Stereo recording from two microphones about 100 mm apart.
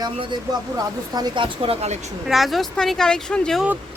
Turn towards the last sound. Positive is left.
turn(degrees=5)  # may be behind; listen again after turning